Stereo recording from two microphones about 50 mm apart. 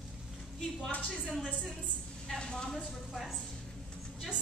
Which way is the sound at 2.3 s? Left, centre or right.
Centre.